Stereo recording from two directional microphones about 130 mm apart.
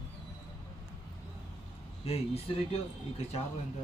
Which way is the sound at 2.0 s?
50° left (ahead or behind).